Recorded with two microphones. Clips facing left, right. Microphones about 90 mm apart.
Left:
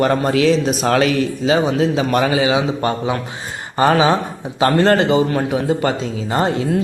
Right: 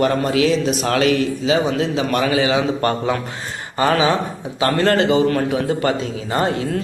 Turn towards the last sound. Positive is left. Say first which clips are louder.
# left 2 dB
turn(degrees=25)  # may be behind; listen again after turning